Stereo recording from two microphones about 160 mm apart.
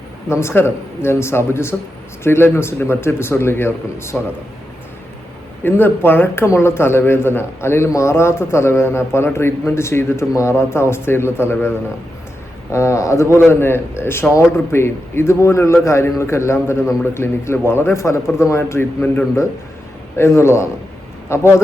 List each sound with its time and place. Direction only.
0.3 s a man's voice: 15° left (ahead or behind)
5.6 s a man's voice: 15° left (ahead or behind)